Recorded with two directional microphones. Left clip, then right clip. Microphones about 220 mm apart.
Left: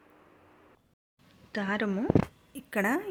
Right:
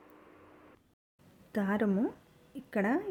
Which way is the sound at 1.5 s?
15° right (ahead or behind).